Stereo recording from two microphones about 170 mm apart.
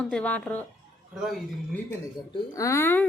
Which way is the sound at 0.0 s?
5° left (ahead or behind).